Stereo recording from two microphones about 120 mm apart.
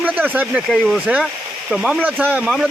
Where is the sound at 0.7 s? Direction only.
Centre (ahead or behind).